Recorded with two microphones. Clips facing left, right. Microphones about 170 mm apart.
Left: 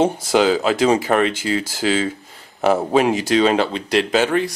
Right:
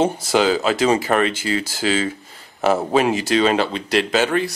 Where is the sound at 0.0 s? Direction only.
5° left (ahead or behind).